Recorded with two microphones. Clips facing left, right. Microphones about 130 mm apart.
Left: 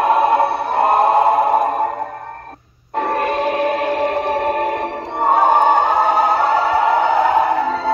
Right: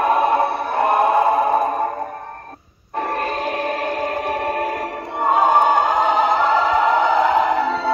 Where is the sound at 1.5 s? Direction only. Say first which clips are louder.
Left 2 dB; 50° left (ahead or behind).